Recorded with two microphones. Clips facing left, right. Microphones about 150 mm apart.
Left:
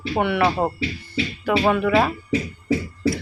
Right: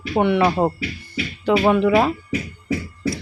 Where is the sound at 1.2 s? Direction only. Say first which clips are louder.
Left 2 dB; 30° left (ahead or behind).